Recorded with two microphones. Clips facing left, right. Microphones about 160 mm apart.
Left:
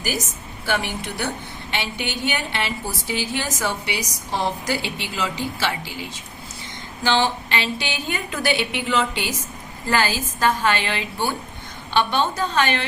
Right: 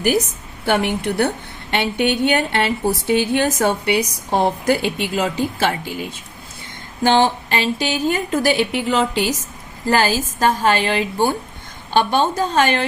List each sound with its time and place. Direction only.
0.6 s a woman's voice: 60° right (ahead or behind)